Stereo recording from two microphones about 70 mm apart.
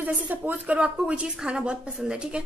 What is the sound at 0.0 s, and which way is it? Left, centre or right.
Speech, right.